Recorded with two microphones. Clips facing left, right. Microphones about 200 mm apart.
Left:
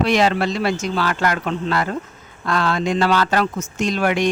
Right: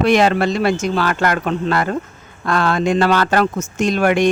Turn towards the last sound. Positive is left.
turn(degrees=-50)  # may be behind; listen again after turning